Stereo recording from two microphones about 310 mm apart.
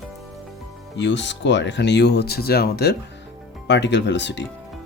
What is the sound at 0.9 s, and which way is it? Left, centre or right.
Speech, left.